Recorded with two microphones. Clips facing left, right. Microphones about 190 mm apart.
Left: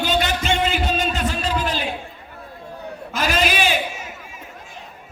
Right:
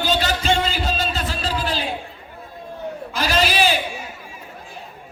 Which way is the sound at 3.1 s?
35° right (ahead or behind).